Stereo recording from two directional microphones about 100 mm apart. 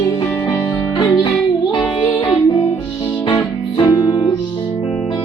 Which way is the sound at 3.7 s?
45° left (ahead or behind).